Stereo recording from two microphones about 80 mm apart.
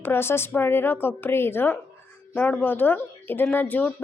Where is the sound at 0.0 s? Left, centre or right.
Left.